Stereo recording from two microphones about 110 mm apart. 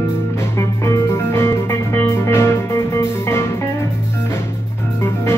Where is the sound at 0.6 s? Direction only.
25° left (ahead or behind).